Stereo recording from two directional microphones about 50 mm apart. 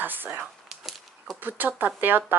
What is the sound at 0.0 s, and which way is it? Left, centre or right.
Speech, right.